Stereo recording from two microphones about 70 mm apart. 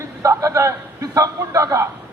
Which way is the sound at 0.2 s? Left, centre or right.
Right.